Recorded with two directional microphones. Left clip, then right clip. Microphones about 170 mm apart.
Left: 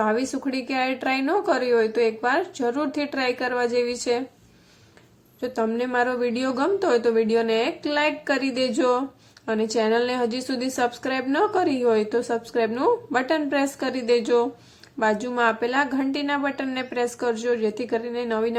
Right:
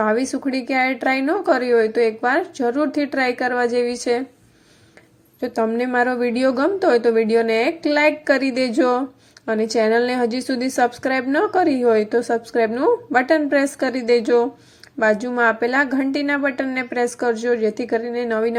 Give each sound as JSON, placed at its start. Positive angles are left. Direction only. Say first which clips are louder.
{"t": 0.0, "sound": "a woman's voice", "louder": "right 4 dB", "side_deg": -15}
{"t": 5.4, "sound": "a woman's voice", "louder": "right 4 dB", "side_deg": -20}